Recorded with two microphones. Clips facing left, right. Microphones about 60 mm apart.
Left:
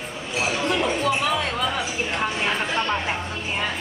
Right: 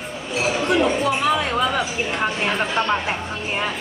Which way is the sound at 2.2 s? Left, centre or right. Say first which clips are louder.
Right 3 dB; centre.